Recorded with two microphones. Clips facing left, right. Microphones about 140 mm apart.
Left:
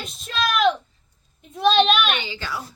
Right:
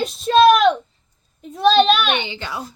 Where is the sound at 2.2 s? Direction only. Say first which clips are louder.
Right 3 dB; 20° right (ahead or behind).